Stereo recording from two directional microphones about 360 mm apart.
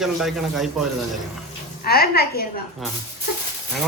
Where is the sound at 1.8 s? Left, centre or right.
Left.